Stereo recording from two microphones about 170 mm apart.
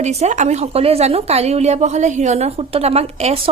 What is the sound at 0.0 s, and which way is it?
Speech, 40° right (ahead or behind).